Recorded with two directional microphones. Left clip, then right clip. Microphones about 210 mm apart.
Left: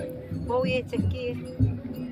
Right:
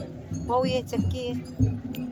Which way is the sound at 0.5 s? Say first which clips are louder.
Right 1 dB; 55° right (ahead or behind).